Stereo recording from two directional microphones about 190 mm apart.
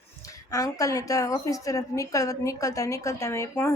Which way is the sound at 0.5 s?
20° left (ahead or behind).